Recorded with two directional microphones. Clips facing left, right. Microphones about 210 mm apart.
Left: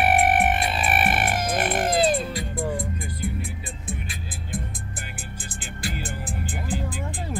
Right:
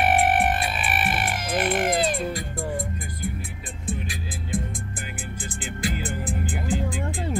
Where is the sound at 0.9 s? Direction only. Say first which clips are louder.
Left 4 dB; 55° left (ahead or behind); by 2.2 s 35° left (ahead or behind).